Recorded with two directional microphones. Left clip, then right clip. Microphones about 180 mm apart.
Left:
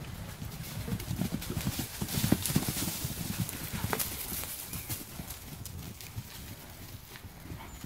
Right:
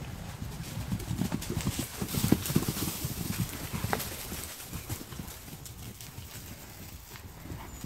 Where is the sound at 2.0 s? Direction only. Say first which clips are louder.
Right 1 dB; 45° left (ahead or behind).